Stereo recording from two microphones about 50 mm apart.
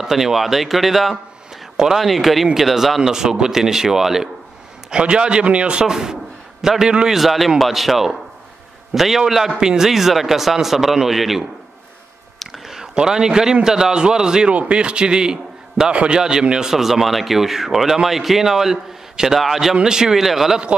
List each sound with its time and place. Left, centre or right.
0.0 s speech: centre
4.9 s a man's voice: centre
7.2 s speech: centre
12.6 s a sound: centre
12.9 s a man's voice: centre
16.2 s speech: centre